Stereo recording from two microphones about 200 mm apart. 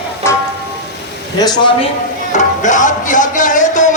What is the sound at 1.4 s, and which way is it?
Speech, 20° left (ahead or behind).